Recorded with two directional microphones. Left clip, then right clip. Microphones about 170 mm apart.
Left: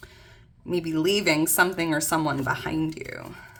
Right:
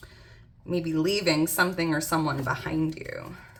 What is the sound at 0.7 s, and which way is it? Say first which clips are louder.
Speech: left 2 dB; 30° left (ahead or behind).